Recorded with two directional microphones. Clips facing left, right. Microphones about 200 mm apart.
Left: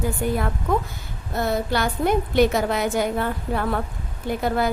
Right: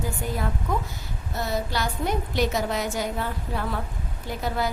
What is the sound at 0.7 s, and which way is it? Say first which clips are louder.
A woman's voice: left 5 dB; 55° left (ahead or behind).